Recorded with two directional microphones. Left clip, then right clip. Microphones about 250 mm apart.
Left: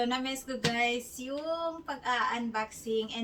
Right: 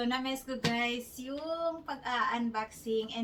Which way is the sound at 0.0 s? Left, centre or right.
Centre.